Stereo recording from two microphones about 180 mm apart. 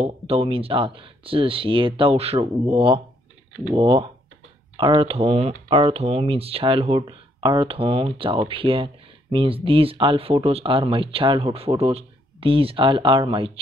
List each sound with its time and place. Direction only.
0.0 s speech: 35° right (ahead or behind)